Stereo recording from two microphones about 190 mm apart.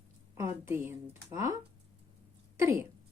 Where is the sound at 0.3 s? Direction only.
10° right (ahead or behind).